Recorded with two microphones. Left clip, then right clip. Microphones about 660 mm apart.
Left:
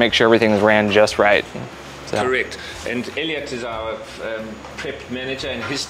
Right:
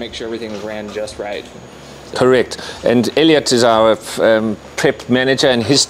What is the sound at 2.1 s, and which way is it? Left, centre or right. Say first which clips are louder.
Speech: right 7 dB; right.